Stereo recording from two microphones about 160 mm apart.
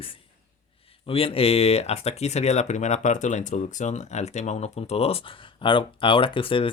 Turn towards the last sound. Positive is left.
turn(degrees=35)  # may be behind; listen again after turning